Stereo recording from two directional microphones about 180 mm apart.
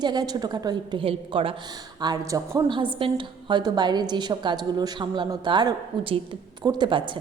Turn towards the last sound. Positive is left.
turn(degrees=-25)  # may be behind; listen again after turning